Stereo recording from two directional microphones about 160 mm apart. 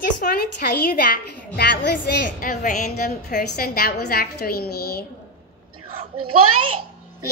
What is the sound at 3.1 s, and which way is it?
A woman's voice, 70° left (ahead or behind).